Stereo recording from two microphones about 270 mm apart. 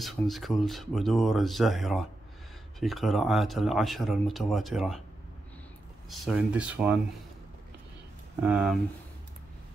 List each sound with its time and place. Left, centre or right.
0.0 s speech: centre
6.0 s speech: centre
8.4 s speech: centre